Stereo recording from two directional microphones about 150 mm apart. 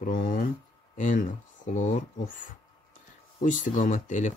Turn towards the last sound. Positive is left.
turn(degrees=55)  # may be behind; listen again after turning